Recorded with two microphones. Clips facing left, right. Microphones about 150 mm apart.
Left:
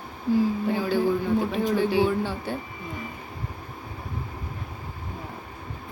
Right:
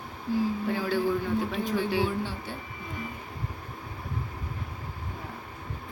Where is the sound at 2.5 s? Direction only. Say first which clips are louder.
Left 8 dB; 55° left (ahead or behind).